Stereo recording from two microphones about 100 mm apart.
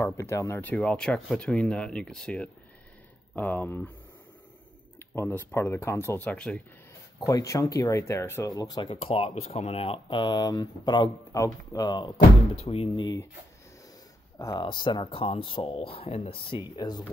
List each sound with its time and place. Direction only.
0.2 s speech: 30° left (ahead or behind)
0.6 s speech: 15° left (ahead or behind)
4.9 s speech: 25° left (ahead or behind)
7.2 s speech: 35° left (ahead or behind)
8.5 s speech: 40° left (ahead or behind)
8.8 s speech: 80° left; by 11.1 s 45° left (ahead or behind)
11.3 s speech: 35° left (ahead or behind)
12.6 s speech: 75° left (ahead or behind)
14.4 s speech: 50° left (ahead or behind); by 16.6 s 70° left (ahead or behind)
16.7 s speech: 40° left (ahead or behind)